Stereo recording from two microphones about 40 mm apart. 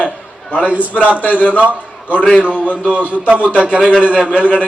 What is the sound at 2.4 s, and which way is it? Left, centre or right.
A man's voice, right.